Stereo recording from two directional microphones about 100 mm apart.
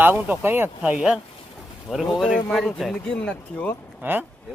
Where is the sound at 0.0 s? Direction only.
20° right (ahead or behind).